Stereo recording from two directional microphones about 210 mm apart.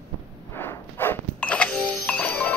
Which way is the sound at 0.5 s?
10° left (ahead or behind).